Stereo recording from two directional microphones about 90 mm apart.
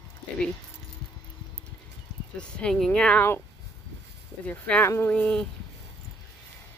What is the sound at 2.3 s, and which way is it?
Speech, 5° left (ahead or behind).